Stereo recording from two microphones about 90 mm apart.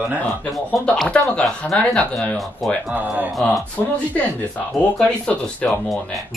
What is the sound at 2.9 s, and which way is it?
Speech, 15° right (ahead or behind).